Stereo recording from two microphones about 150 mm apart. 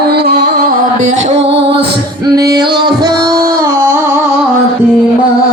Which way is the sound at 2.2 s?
25° right (ahead or behind).